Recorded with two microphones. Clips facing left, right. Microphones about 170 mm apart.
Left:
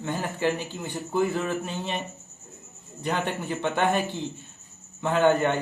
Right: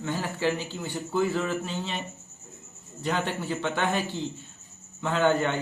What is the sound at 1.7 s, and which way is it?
Speech, 55° left (ahead or behind).